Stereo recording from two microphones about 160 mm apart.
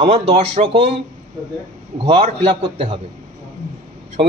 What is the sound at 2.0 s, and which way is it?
A man's voice, 35° right (ahead or behind).